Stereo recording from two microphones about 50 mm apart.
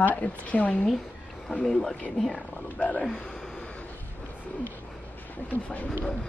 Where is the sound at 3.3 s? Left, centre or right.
Centre.